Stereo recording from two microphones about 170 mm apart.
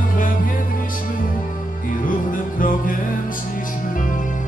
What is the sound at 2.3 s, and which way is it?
Music, 55° left (ahead or behind).